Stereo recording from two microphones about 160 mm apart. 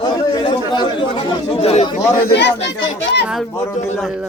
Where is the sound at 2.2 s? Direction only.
90° left.